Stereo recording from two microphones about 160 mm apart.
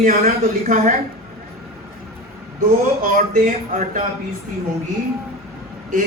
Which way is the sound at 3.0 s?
55° right (ahead or behind).